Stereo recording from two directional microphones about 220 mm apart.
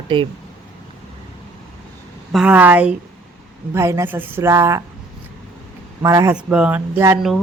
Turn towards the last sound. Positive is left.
turn(degrees=-10)  # may be behind; listen again after turning